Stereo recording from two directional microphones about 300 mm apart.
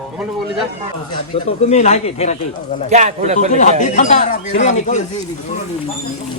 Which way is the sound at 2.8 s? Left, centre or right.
Right.